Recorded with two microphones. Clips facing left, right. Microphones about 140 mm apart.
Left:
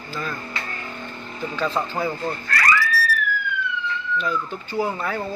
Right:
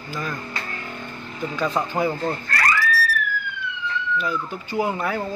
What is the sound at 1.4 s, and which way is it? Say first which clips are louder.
Speech: right 1 dB; 10° right (ahead or behind).